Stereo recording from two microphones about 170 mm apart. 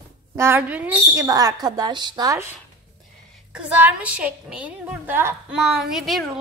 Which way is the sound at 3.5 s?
10° right (ahead or behind).